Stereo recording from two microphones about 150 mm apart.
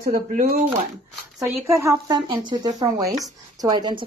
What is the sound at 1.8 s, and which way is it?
Speech, 25° right (ahead or behind).